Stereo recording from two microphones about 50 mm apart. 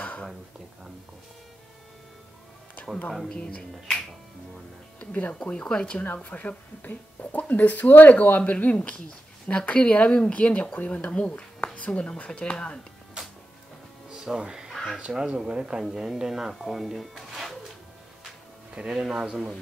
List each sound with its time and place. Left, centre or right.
3.1 s speech: centre
3.5 s speech: centre
5.3 s speech: centre
6.1 s speech: left
14.1 s music: centre
14.7 s a sound: centre
15.0 s speech: centre
15.8 s speech: centre
18.8 s speech: centre